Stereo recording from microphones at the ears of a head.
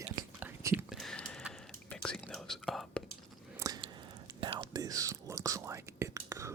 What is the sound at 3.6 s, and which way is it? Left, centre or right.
Chewing, right.